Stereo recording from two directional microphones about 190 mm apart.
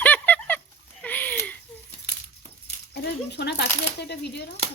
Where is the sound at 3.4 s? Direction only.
60° left (ahead or behind).